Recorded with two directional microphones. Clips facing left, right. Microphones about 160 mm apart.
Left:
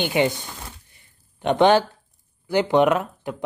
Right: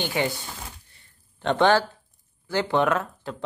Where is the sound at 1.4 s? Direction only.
15° left (ahead or behind).